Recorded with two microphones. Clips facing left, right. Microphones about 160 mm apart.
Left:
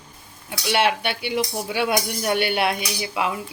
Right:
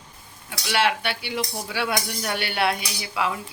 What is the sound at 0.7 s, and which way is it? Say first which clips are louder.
Speech: left 2 dB; 20° left (ahead or behind).